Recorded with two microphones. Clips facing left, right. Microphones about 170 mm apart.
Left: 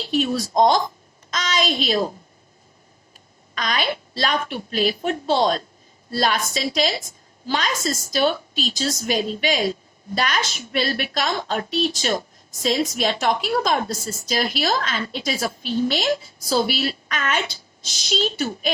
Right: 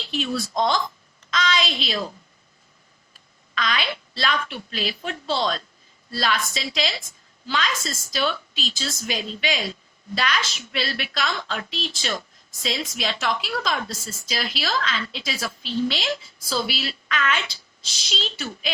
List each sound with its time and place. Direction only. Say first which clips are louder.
0.0 s a woman's voice: left 5 dB; 45° left (ahead or behind)
3.5 s a woman's voice: left 2 dB; 45° left (ahead or behind)